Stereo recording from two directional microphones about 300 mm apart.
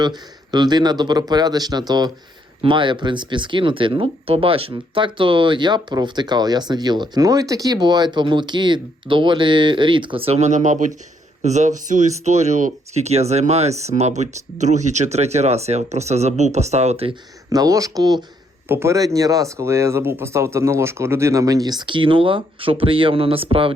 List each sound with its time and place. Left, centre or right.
0.0 s speech: centre